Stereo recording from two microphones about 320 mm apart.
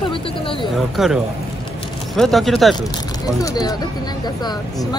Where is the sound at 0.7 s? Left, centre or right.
Centre.